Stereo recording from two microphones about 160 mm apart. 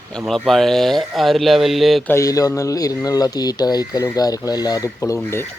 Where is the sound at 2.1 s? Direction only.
20° left (ahead or behind).